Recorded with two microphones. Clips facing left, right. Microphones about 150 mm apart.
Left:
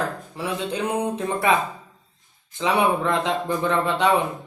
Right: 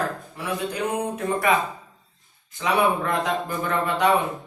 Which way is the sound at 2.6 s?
25° left (ahead or behind).